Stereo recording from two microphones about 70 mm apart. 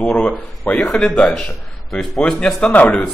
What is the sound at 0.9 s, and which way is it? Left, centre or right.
A man's voice, centre.